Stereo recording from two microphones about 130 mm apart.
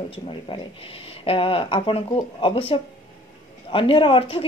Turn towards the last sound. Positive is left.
turn(degrees=45)  # may be behind; listen again after turning